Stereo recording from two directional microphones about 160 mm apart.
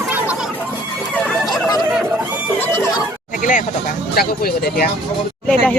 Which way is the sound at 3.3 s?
55° left (ahead or behind).